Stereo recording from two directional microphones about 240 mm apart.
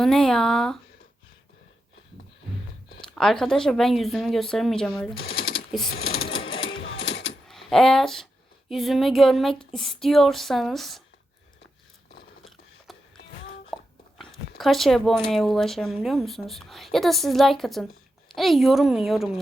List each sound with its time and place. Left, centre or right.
0.0 s a woman's voice: centre
3.0 s a woman's voice: centre
5.9 s speech: left
6.2 s sewing machine: left
6.7 s a sound: left
7.4 s a woman's voice: centre
12.9 s music: centre
13.7 s a sound: centre
14.6 s a woman's voice: centre